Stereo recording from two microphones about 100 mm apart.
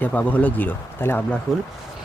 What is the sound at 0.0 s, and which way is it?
Speech, 15° left (ahead or behind).